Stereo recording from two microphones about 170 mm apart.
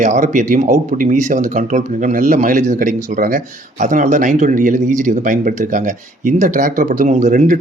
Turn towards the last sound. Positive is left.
turn(degrees=-50)  # may be behind; listen again after turning